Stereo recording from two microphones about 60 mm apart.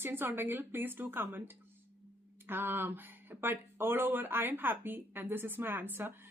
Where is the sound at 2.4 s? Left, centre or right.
Right.